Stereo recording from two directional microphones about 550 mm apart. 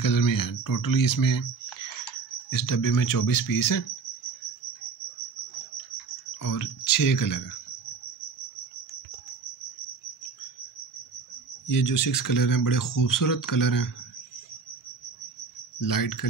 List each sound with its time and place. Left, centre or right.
0.0 s speech: left
6.4 s speech: left
11.6 s speech: left
15.8 s speech: left